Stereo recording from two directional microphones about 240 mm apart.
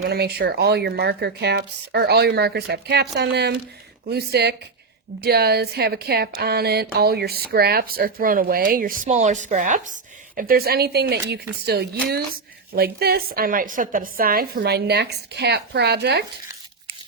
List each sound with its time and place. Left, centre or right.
0.0 s speech: right